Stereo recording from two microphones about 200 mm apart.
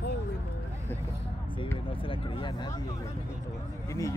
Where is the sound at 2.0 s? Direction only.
25° left (ahead or behind).